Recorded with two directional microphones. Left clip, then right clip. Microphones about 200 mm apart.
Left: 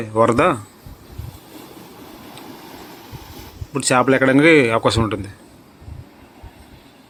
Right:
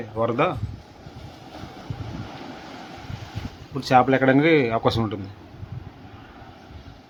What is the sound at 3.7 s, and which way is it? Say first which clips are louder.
Speech: left 2 dB; 10° left (ahead or behind).